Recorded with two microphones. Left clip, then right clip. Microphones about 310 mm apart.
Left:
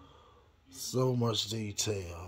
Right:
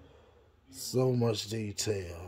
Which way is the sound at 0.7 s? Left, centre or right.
Right.